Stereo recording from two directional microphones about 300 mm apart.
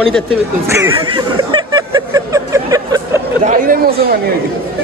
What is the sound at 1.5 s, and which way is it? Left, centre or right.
Music, centre.